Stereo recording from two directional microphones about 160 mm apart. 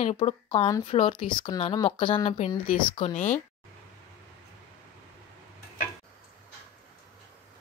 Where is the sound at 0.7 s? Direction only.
20° left (ahead or behind).